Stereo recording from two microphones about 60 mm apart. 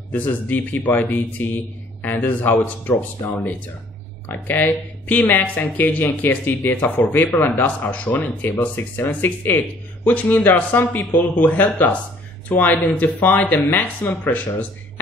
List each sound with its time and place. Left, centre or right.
0.1 s speech: left
4.3 s speech: left